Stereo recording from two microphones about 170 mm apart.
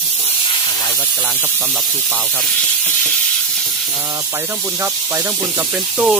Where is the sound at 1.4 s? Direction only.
10° right (ahead or behind).